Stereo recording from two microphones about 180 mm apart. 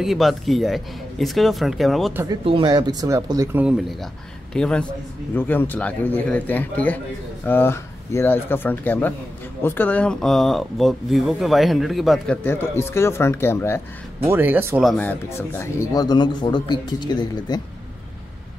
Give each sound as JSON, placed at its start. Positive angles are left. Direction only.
{"t": 0.0, "sound": "speech", "side_deg": 0}
{"t": 2.4, "sound": "speech", "side_deg": -25}
{"t": 3.6, "sound": "a man's voice", "side_deg": -5}
{"t": 12.4, "sound": "a man's voice", "side_deg": 15}
{"t": 14.2, "sound": "speech", "side_deg": -10}
{"t": 15.0, "sound": "speech", "side_deg": 10}